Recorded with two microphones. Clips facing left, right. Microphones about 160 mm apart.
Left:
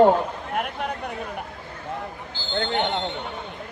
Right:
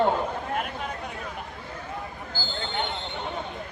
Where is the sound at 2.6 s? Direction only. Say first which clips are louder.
Left 7 dB; 75° left (ahead or behind).